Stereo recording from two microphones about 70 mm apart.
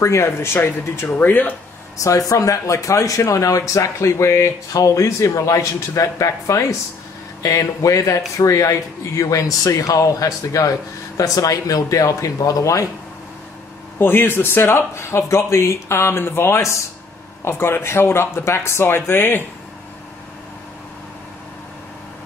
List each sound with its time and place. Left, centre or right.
0.0 s speech: left
1.1 s speech: left
2.0 s speech: left
13.9 s speech: left